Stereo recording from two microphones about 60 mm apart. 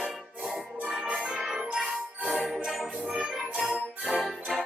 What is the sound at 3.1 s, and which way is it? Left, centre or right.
Music, centre.